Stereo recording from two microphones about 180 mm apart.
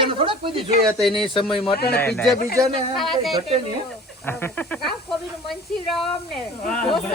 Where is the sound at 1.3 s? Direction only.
30° left (ahead or behind).